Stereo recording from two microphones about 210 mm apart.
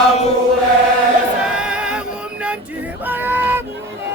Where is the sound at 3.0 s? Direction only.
10° right (ahead or behind).